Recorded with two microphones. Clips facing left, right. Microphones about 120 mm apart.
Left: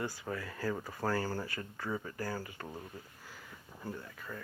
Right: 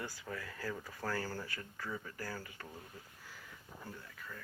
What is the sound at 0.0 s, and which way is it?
Speech, 50° left (ahead or behind).